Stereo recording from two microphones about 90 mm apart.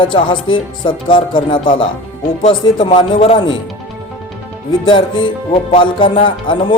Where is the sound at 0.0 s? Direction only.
65° left (ahead or behind).